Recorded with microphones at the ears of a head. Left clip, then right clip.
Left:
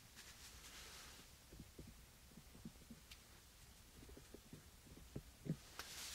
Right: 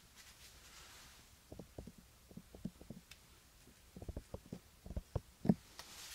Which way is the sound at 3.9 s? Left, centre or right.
Right.